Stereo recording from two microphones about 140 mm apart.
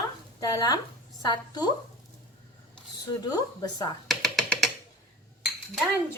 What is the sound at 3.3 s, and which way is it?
Speech, 25° left (ahead or behind).